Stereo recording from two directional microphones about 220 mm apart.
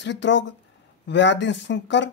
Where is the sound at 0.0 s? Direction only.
55° left (ahead or behind).